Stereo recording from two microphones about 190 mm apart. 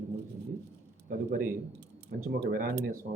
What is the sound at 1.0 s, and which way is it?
Speech, 45° right (ahead or behind).